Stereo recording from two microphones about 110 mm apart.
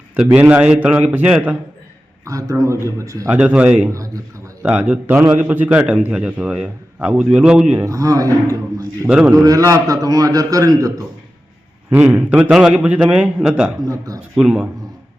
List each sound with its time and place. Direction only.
0.3 s a man's voice: 15° right (ahead or behind)
2.2 s a man's voice: 30° right (ahead or behind)
3.3 s a man's voice: 10° right (ahead or behind)
3.9 s a man's voice: 30° right (ahead or behind)
4.6 s a man's voice: 10° right (ahead or behind)
7.9 s a man's voice: 30° right (ahead or behind)
9.0 s a man's voice: 5° right (ahead or behind)
9.3 s a man's voice: 30° right (ahead or behind)
11.9 s a man's voice: 15° right (ahead or behind)
13.8 s a man's voice: 30° right (ahead or behind)
14.3 s a man's voice: 5° right (ahead or behind)